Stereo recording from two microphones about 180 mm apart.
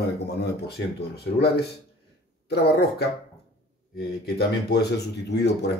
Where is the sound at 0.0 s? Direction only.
65° left (ahead or behind).